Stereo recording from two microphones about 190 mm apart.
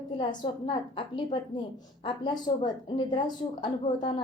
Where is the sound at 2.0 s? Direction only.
25° left (ahead or behind).